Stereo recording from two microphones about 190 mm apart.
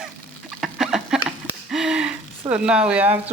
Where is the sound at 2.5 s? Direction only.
5° right (ahead or behind).